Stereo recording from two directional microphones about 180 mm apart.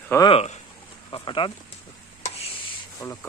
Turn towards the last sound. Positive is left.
turn(degrees=15)  # may be behind; listen again after turning